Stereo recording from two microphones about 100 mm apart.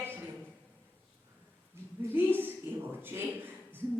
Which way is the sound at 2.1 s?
20° right (ahead or behind).